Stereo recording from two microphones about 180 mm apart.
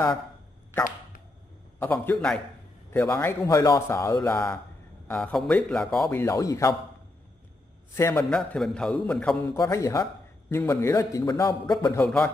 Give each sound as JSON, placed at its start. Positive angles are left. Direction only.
{"t": 1.8, "sound": "a man's voice", "side_deg": 10}
{"t": 6.0, "sound": "speech", "side_deg": 15}
{"t": 7.9, "sound": "speech", "side_deg": 15}
{"t": 8.3, "sound": "a man's voice", "side_deg": 5}
{"t": 9.6, "sound": "a man's voice", "side_deg": 15}
{"t": 12.0, "sound": "a man's voice", "side_deg": 5}